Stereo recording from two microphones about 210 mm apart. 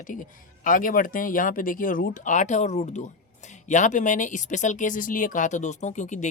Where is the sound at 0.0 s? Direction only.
40° left (ahead or behind).